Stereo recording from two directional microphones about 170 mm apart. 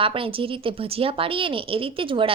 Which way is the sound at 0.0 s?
30° right (ahead or behind).